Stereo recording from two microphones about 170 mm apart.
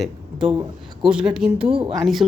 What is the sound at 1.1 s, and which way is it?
Speech, 5° right (ahead or behind).